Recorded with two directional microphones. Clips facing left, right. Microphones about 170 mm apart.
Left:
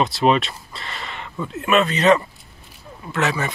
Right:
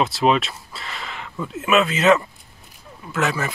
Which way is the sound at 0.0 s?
Centre (ahead or behind).